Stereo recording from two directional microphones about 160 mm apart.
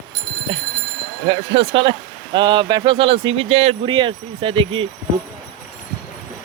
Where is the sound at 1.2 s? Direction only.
35° right (ahead or behind).